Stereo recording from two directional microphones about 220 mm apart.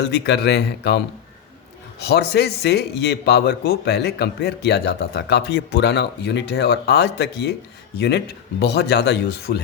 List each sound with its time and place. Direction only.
0.0 s a man's voice: 50° left (ahead or behind)